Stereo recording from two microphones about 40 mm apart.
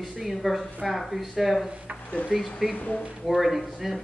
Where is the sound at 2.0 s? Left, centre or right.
Left.